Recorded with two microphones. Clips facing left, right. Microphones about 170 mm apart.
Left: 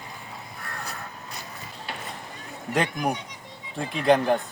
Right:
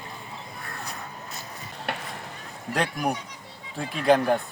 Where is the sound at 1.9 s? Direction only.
65° right (ahead or behind).